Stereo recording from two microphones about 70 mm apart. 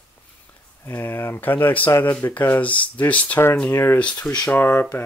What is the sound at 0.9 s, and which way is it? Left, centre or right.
Speech, left.